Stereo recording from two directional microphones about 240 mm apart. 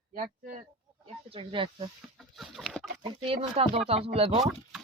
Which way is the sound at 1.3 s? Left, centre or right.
Right.